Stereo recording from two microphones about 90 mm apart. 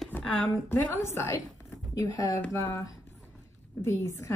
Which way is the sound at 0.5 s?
25° left (ahead or behind).